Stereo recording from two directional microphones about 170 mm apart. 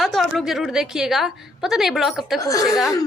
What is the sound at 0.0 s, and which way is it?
A woman's voice, centre (ahead or behind).